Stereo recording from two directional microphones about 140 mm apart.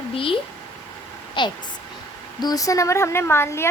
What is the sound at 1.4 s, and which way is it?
Speech, 35° left (ahead or behind).